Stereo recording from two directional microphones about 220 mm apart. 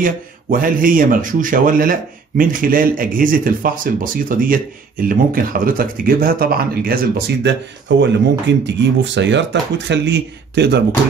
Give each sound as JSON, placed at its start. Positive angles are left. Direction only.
{"t": 0.0, "sound": "speech", "side_deg": -40}